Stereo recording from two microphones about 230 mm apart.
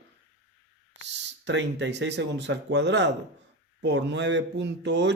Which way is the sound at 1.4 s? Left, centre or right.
Right.